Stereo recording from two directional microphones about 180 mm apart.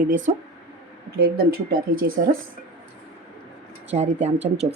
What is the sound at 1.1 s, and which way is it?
Speech, 55° right (ahead or behind).